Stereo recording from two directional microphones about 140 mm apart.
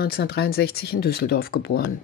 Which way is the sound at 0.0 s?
90° left.